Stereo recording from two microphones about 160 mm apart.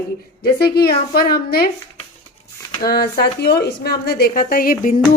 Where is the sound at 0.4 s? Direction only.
80° left.